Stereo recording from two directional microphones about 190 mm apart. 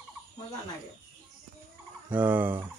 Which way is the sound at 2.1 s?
10° right (ahead or behind).